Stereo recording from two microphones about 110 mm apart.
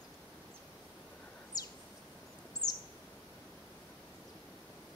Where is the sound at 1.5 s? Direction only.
35° left (ahead or behind).